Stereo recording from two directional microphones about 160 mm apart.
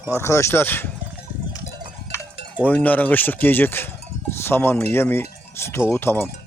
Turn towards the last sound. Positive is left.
turn(degrees=15)  # may be behind; listen again after turning